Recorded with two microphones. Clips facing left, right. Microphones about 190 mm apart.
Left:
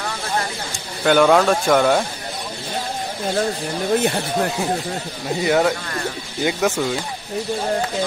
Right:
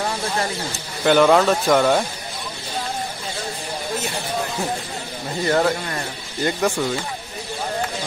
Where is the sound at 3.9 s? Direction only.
55° left (ahead or behind).